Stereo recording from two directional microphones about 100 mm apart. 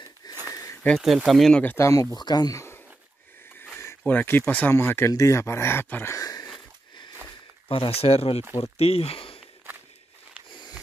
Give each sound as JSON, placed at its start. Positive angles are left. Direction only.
{"t": 0.2, "sound": "a sound", "side_deg": 40}
{"t": 1.0, "sound": "speech", "side_deg": 0}
{"t": 1.6, "sound": "speech", "side_deg": 20}
{"t": 1.9, "sound": "speech", "side_deg": 30}
{"t": 2.1, "sound": "speech", "side_deg": 45}
{"t": 3.7, "sound": "speech", "side_deg": 20}
{"t": 6.1, "sound": "a sound", "side_deg": 35}
{"t": 7.6, "sound": "speech", "side_deg": 60}